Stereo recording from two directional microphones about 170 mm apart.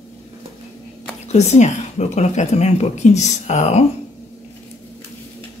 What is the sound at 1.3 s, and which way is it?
A woman's voice, 40° left (ahead or behind).